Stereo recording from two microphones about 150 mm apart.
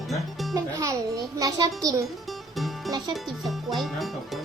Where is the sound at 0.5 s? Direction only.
20° right (ahead or behind).